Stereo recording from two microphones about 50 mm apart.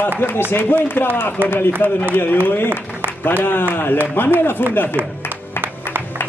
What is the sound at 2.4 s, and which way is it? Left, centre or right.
A man's voice, left.